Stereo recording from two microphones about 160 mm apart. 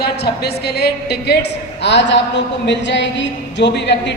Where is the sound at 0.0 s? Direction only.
90° left.